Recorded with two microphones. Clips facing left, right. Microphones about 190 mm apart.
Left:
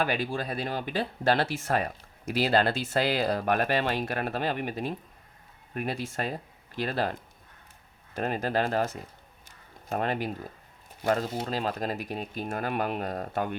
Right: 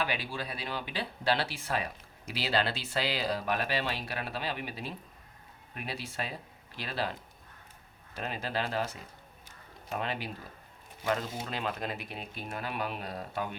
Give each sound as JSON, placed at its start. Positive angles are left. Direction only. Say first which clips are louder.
{"t": 0.0, "sound": "speech", "louder": "left 6 dB", "side_deg": 50}
{"t": 9.9, "sound": "speech", "louder": "left 6 dB", "side_deg": 45}